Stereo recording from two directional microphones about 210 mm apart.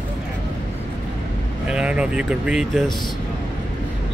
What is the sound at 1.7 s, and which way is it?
Speech, 5° right (ahead or behind).